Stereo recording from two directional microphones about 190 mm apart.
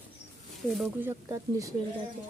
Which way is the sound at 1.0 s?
15° right (ahead or behind).